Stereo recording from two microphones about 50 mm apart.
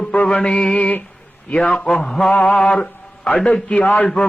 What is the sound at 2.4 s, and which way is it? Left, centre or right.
Speech, left.